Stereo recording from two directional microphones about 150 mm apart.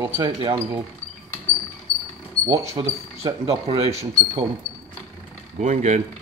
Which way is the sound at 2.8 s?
35° right (ahead or behind).